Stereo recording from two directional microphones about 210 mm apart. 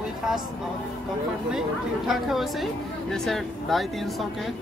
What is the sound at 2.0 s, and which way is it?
A woman's voice, centre (ahead or behind).